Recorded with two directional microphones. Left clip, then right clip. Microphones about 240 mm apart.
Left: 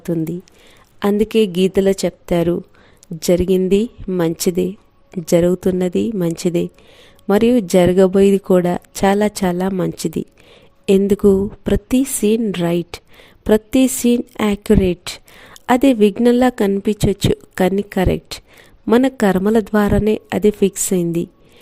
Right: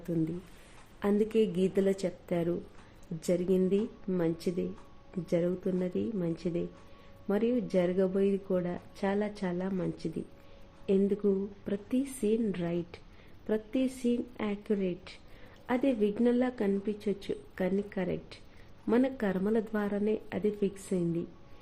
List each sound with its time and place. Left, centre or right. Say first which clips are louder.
0.9 s speech: left 13 dB; left